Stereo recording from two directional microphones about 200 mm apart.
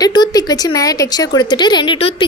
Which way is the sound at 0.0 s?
20° left (ahead or behind).